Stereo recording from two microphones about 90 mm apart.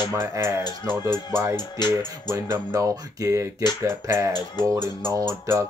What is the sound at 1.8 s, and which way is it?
Music, 50° left (ahead or behind).